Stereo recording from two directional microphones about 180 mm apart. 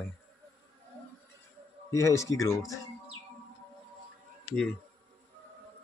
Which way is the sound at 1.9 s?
15° left (ahead or behind).